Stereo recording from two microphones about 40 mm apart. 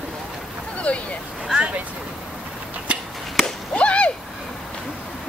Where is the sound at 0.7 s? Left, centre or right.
Left.